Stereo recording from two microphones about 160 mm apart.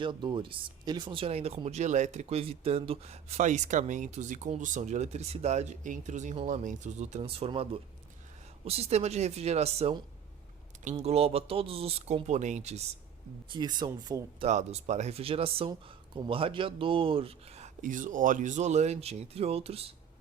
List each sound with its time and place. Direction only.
0.0 s speech: 30° right (ahead or behind); by 12.8 s 45° right (ahead or behind)
13.5 s speech: 25° right (ahead or behind)
14.4 s speech: 45° right (ahead or behind)